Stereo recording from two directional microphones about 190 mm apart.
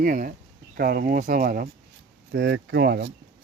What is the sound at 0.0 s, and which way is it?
Speech, 45° right (ahead or behind).